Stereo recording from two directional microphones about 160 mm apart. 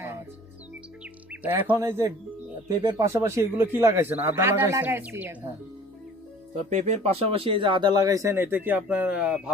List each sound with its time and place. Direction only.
1.3 s speech: 10° right (ahead or behind)
6.5 s speech: 45° right (ahead or behind); by 9.5 s 5° right (ahead or behind)